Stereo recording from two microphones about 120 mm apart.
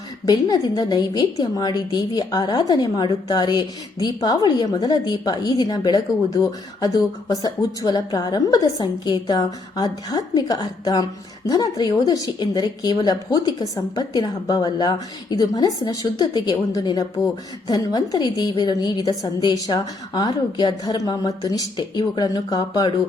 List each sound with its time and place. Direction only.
0.3 s a woman's voice: 35° left (ahead or behind)